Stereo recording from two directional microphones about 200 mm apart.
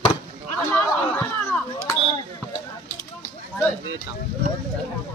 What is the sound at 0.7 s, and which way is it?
Speech, 10° left (ahead or behind).